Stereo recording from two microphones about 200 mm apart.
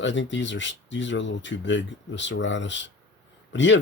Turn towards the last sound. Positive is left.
turn(degrees=65)  # may be behind; listen again after turning